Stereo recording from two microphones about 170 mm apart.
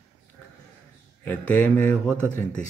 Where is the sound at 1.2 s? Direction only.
10° left (ahead or behind).